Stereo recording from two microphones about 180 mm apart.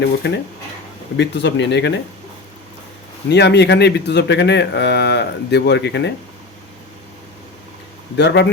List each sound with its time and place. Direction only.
0.0 s a man's voice: 70° left (ahead or behind)
3.2 s a man's voice: 70° left (ahead or behind)
8.1 s a man's voice: 70° left (ahead or behind)